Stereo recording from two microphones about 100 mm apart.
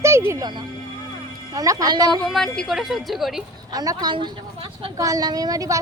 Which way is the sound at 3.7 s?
40° right (ahead or behind).